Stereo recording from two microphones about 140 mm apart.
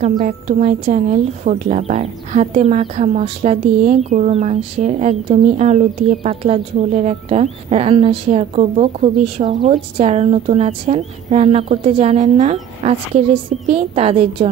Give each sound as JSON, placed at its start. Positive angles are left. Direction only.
{"t": 0.0, "sound": "a woman's voice", "side_deg": -60}